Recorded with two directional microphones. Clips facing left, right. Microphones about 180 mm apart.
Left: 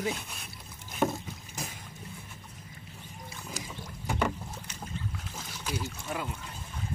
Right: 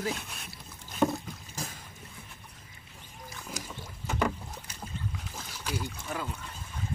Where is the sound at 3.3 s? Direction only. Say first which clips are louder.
Even; centre (ahead or behind).